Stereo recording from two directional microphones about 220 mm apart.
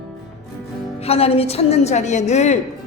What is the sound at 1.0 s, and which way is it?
A woman's voice, 25° left (ahead or behind).